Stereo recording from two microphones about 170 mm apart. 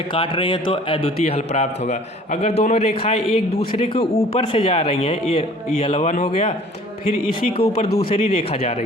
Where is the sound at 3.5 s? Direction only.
65° left (ahead or behind).